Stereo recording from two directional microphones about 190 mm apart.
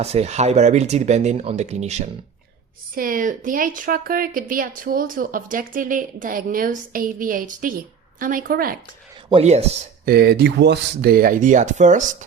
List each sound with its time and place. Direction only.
0.0 s speech: 35° right (ahead or behind)
2.9 s a woman's voice: 45° right (ahead or behind)
9.3 s speech: 35° right (ahead or behind)
10.1 s a woman's voice: 55° right (ahead or behind); by 12.0 s 40° right (ahead or behind)